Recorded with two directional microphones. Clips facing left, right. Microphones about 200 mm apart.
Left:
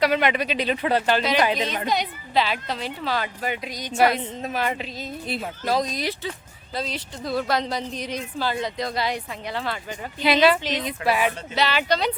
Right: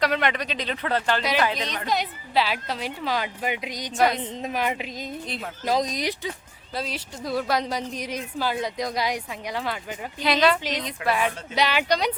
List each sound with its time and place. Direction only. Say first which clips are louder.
0.0 s speech: left 3 dB; 5° left (ahead or behind)
1.9 s speech: left 1 dB; 5° right (ahead or behind)
3.9 s speech: left 2 dB; 5° left (ahead or behind)
4.4 s speech: even; 15° right (ahead or behind)
5.2 s speech: left 4 dB; 5° left (ahead or behind)
5.6 s speech: even; 15° right (ahead or behind)
10.3 s speech: left 3 dB; 5° left (ahead or behind)
11.5 s speech: right 1 dB; 15° right (ahead or behind)